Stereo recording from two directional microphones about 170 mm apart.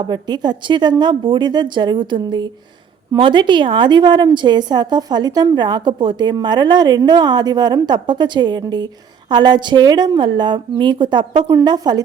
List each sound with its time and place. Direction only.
0.0 s a woman's voice: 25° right (ahead or behind)